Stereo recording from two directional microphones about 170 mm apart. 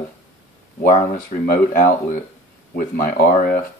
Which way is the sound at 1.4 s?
60° left (ahead or behind).